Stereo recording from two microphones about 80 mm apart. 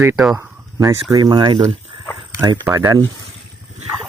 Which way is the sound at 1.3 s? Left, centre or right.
Right.